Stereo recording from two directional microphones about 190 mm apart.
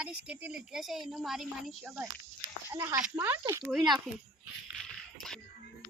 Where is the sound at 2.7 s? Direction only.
15° right (ahead or behind).